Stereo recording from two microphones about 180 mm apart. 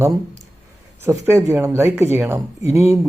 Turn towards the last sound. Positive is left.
turn(degrees=-15)  # may be behind; listen again after turning